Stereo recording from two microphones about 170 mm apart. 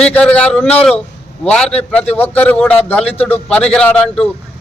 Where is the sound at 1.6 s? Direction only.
35° left (ahead or behind).